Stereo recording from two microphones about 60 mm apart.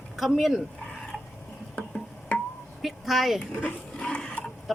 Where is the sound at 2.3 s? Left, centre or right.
Left.